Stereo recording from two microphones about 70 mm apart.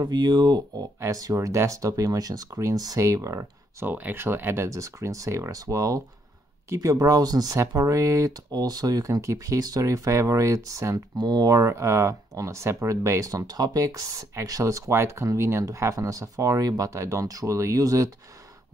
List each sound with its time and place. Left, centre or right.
0.0 s speech: right
1.0 s speech: right
3.8 s speech: right
4.6 s speech: right
11.1 s speech: right
11.6 s speech: right
13.5 s speech: right